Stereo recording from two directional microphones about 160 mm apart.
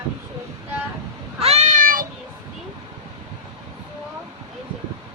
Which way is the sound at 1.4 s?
40° right (ahead or behind).